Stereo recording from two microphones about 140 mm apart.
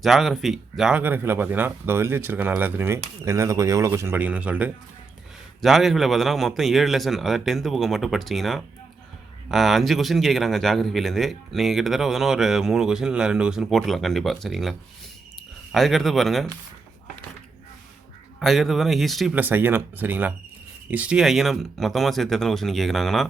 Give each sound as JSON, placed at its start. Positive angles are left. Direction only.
{"t": 0.0, "sound": "a man's voice", "side_deg": 0}
{"t": 18.3, "sound": "a man's voice", "side_deg": 0}
{"t": 19.3, "sound": "a man's voice", "side_deg": -15}